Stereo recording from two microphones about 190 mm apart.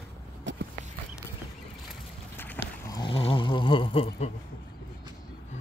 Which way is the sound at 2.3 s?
10° left (ahead or behind).